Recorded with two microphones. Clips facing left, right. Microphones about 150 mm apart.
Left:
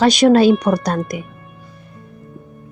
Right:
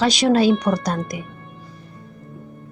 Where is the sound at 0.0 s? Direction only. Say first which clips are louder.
Left 5 dB; 50° left (ahead or behind).